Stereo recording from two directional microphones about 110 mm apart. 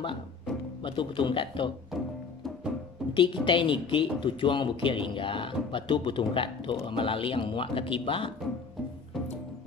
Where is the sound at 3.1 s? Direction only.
50° left (ahead or behind).